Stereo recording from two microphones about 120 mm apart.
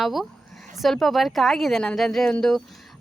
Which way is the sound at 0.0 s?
Centre (ahead or behind).